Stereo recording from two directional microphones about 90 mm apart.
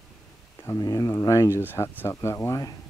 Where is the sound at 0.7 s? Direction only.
40° left (ahead or behind).